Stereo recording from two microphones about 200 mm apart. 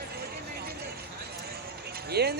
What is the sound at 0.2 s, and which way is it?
Vehicle, 50° right (ahead or behind).